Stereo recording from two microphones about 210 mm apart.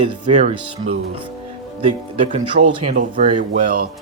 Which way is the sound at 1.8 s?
35° right (ahead or behind).